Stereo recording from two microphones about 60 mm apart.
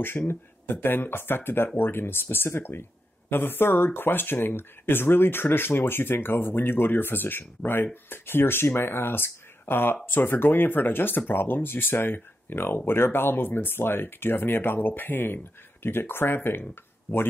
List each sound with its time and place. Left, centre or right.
0.3 s speech: left